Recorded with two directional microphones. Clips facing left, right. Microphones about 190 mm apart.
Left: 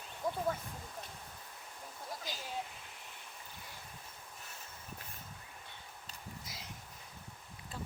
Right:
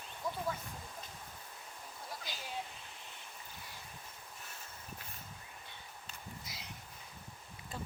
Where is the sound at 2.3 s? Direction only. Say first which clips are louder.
Left 3 dB; 45° left (ahead or behind).